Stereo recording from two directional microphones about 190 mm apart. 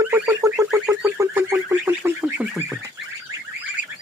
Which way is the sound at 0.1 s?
15° right (ahead or behind).